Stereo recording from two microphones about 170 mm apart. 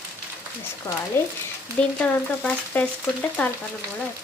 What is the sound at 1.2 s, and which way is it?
Speech, 15° left (ahead or behind).